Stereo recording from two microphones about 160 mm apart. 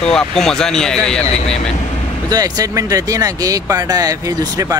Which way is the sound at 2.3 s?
25° right (ahead or behind).